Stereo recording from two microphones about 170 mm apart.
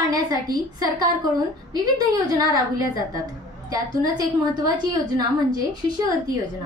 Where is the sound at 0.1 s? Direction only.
20° right (ahead or behind).